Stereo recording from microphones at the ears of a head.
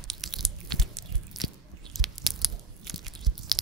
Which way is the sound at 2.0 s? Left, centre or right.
Right.